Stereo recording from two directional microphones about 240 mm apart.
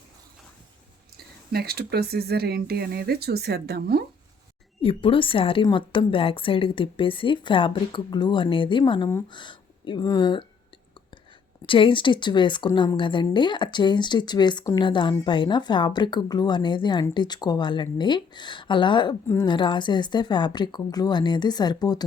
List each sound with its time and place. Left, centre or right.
1.1 s speech: right
4.8 s speech: left
11.6 s speech: left